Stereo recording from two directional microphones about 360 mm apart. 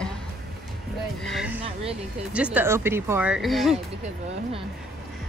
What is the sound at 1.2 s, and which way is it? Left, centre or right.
Speech, centre.